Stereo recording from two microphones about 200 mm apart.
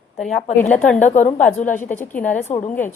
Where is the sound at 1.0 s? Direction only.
40° left (ahead or behind).